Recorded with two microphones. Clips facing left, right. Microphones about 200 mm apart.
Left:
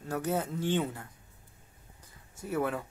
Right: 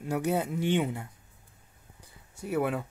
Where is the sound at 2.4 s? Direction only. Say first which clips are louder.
Right 3 dB; 15° right (ahead or behind).